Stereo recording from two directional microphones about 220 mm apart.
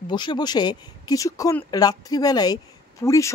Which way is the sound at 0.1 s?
20° left (ahead or behind).